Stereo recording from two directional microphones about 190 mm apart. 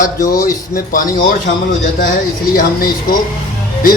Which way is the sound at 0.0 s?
45° left (ahead or behind).